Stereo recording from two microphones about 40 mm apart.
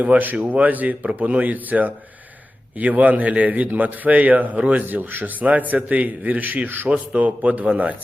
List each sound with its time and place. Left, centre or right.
0.0 s a man's voice: right
0.3 s a man's voice: right
4.9 s a man's voice: right
6.8 s a man's voice: right